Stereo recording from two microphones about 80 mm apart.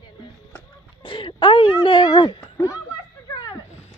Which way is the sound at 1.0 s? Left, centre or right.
Left.